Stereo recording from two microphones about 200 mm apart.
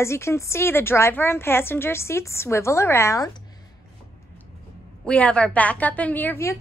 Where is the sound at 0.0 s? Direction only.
15° left (ahead or behind).